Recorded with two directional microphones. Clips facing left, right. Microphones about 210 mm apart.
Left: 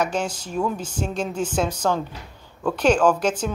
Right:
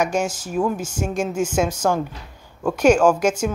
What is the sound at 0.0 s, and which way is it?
A woman's voice, 10° right (ahead or behind).